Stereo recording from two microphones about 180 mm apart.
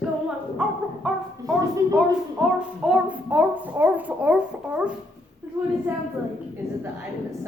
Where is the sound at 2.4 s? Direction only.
5° right (ahead or behind).